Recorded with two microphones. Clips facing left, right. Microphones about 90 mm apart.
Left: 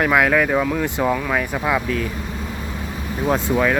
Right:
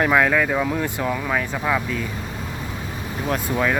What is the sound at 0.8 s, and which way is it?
Speech, 20° left (ahead or behind).